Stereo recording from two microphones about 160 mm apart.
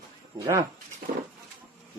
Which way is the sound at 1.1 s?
40° right (ahead or behind).